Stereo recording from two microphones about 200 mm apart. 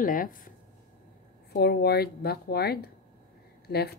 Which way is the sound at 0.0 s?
45° left (ahead or behind).